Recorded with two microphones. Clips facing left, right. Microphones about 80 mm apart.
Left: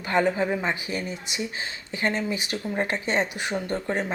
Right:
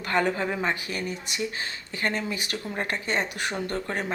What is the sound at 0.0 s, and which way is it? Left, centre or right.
Speech, centre.